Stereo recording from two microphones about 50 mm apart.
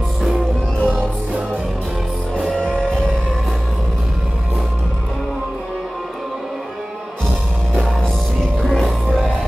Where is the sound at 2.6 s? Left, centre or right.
Left.